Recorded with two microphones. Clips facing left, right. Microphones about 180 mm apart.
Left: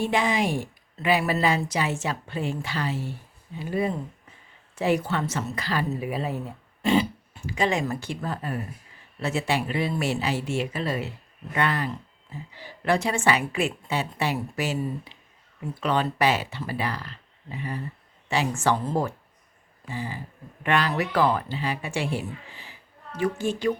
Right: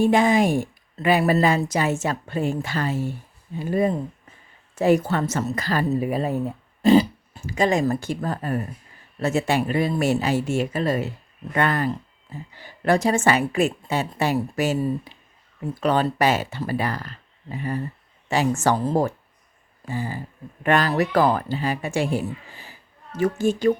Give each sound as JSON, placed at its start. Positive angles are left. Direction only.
{"t": 0.0, "sound": "a woman's voice", "side_deg": -45}